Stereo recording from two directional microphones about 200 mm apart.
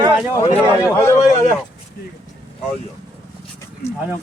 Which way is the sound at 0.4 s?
15° left (ahead or behind).